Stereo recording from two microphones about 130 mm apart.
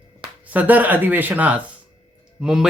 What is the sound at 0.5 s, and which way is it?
Speech, 15° right (ahead or behind).